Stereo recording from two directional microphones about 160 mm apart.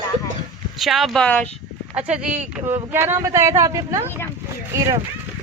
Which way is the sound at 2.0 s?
5° right (ahead or behind).